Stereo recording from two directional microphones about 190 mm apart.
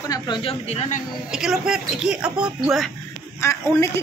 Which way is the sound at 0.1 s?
25° left (ahead or behind).